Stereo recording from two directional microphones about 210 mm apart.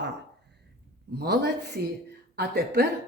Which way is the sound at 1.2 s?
50° right (ahead or behind).